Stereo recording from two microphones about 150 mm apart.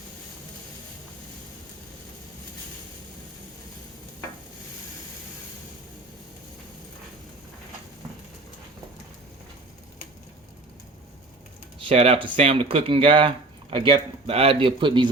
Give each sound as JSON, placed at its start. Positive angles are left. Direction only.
{"t": 11.8, "sound": "speech", "side_deg": -40}